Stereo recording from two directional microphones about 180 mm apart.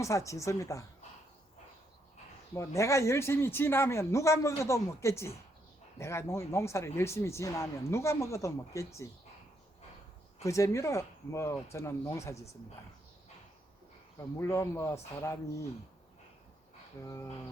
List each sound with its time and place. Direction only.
0.0 s speech: 15° left (ahead or behind)
2.6 s speech: 15° left (ahead or behind)
10.4 s speech: 15° left (ahead or behind)
14.3 s speech: 15° left (ahead or behind)
17.0 s speech: 15° left (ahead or behind)